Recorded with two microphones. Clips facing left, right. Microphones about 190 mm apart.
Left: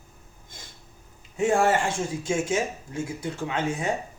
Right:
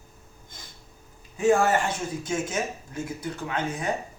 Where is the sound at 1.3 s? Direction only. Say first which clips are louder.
Right 1 dB; 25° left (ahead or behind).